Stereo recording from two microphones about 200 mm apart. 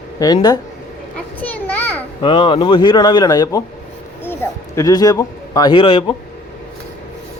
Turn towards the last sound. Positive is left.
turn(degrees=25)  # may be behind; listen again after turning